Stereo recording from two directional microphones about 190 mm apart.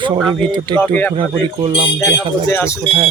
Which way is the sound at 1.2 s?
25° right (ahead or behind).